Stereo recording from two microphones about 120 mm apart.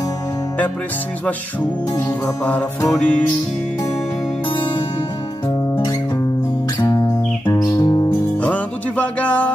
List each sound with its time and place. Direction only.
1.2 s music: 10° left (ahead or behind)
6.8 s music: 30° left (ahead or behind)
8.4 s music: 10° left (ahead or behind)